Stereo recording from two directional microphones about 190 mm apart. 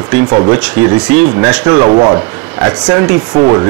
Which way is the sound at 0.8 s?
10° right (ahead or behind).